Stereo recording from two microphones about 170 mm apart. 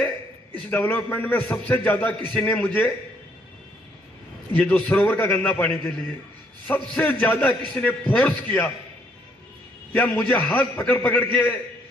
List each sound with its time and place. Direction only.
0.7 s a man's voice: 10° left (ahead or behind)
4.5 s a man's voice: 10° left (ahead or behind)
9.9 s a man's voice: 10° left (ahead or behind)